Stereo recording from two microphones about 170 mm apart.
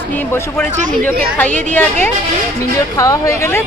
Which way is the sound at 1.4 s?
10° left (ahead or behind).